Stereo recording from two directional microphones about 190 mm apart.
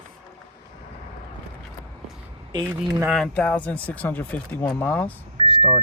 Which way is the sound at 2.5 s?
25° right (ahead or behind).